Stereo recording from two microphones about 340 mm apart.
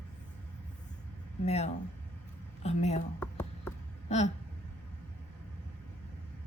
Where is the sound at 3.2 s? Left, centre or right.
Centre.